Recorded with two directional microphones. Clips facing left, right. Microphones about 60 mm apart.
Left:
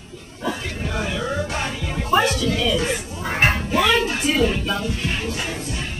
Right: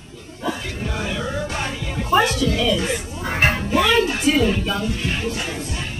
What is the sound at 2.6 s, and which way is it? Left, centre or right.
Music, centre.